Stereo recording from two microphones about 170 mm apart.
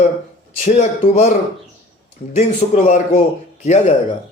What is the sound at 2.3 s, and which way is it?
Speech, 45° left (ahead or behind).